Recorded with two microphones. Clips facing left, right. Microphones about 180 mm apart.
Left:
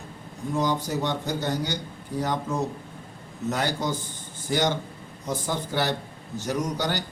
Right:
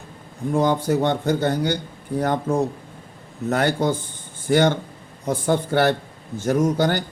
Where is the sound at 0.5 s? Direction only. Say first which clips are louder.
Right 6 dB; 55° right (ahead or behind).